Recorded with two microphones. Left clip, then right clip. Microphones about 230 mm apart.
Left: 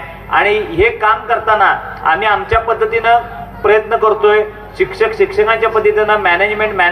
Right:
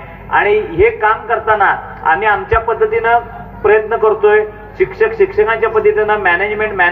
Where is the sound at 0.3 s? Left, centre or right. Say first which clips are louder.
Even; left.